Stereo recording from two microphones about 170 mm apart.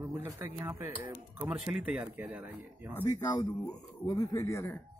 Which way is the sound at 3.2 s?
25° left (ahead or behind).